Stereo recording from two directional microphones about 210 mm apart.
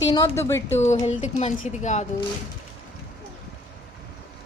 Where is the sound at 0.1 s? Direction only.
15° left (ahead or behind).